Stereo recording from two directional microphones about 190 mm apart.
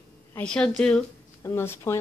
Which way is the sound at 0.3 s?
5° left (ahead or behind).